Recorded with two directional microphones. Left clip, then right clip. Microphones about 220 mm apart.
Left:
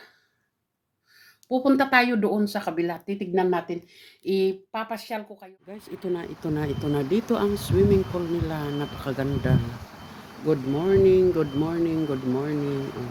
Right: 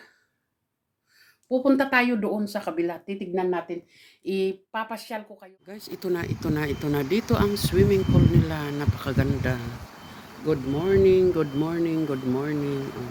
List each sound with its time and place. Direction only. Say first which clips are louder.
1.5 s speech: even; centre (ahead or behind)